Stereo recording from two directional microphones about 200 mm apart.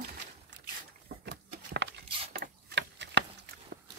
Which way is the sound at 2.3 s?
55° right (ahead or behind).